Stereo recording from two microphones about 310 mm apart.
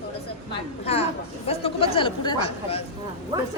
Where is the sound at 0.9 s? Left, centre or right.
Centre.